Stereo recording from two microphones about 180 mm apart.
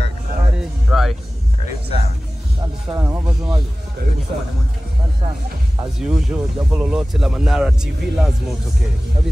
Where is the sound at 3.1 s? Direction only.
5° right (ahead or behind).